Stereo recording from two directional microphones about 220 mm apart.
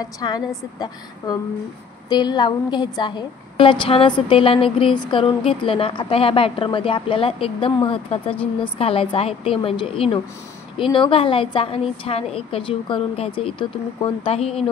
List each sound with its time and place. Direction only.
0.0 s a woman's voice: 20° left (ahead or behind)